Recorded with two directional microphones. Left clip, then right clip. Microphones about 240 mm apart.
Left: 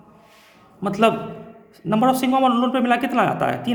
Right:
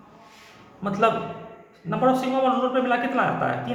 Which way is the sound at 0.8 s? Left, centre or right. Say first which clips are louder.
Left 3 dB; left.